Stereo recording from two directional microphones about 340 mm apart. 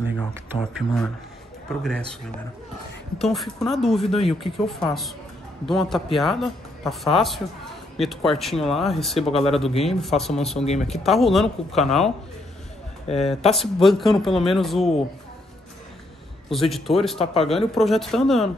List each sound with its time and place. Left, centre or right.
0.2 s speech: centre
3.2 s speech: centre
4.1 s speech: centre
4.4 s speech: centre
9.1 s speech: centre
9.8 s speech: centre
10.6 s speech: centre
10.9 s speech: centre
13.0 s speech: centre
13.6 s speech: centre
16.4 s speech: centre
17.2 s speech: centre
17.7 s speech: centre